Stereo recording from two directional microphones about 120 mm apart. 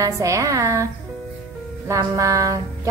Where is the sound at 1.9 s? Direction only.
30° right (ahead or behind).